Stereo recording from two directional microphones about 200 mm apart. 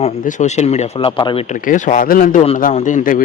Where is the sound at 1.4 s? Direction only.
40° left (ahead or behind).